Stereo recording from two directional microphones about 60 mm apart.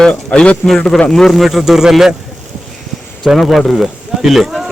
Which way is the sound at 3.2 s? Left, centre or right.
Centre.